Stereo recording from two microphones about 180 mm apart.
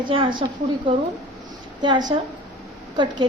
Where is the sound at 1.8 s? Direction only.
25° right (ahead or behind).